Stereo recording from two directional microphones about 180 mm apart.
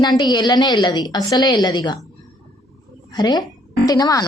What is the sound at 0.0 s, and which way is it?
Speech, 25° left (ahead or behind).